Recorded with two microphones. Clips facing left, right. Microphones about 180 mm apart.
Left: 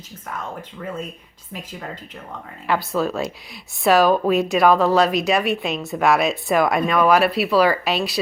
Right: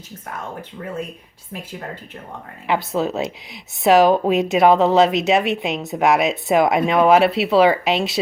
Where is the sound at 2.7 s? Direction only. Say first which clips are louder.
Right 1 dB; 20° right (ahead or behind).